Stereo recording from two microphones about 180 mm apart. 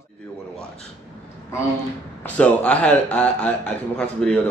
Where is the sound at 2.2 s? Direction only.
5° left (ahead or behind).